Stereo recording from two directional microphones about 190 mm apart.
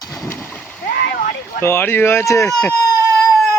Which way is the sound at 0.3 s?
5° left (ahead or behind).